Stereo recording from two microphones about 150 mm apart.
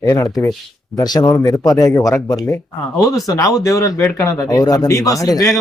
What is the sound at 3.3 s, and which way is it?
Speech, 20° left (ahead or behind).